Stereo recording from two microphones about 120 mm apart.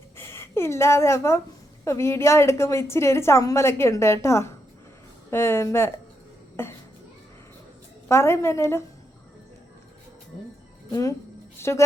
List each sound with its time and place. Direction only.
0.2 s a woman's voice: 20° left (ahead or behind)
8.0 s a woman's voice: 20° left (ahead or behind)
11.6 s a sound: 20° left (ahead or behind)